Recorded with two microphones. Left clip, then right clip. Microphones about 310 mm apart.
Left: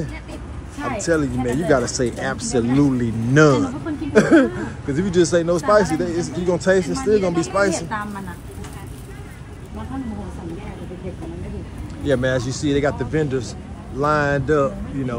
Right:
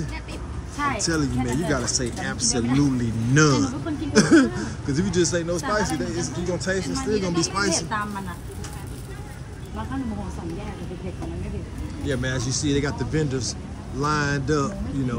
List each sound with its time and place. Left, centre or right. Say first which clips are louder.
0.9 s a man's voice: left 5 dB; centre
12.1 s a man's voice: left 8 dB; centre